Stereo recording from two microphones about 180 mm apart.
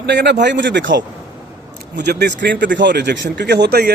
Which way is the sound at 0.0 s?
75° right (ahead or behind).